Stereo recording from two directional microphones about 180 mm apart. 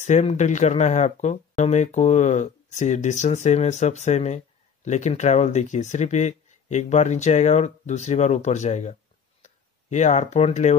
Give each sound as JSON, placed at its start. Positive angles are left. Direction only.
{"t": 0.0, "sound": "speech", "side_deg": 40}